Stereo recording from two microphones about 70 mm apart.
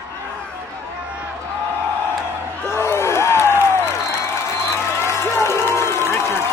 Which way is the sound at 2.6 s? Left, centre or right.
Left.